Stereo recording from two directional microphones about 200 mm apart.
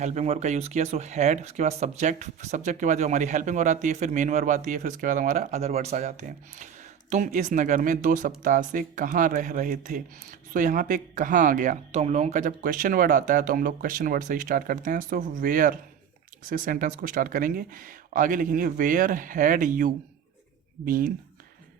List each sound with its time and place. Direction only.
0.0 s speech: 35° right (ahead or behind)